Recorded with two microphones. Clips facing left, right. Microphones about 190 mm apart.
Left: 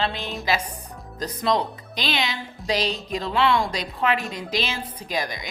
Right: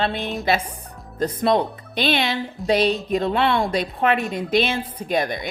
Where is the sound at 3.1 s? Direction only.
55° right (ahead or behind).